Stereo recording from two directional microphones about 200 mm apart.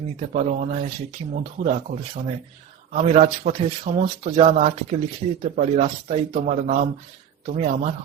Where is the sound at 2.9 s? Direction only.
35° right (ahead or behind).